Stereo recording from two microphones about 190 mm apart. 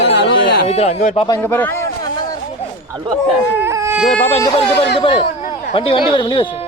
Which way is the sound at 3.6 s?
15° right (ahead or behind).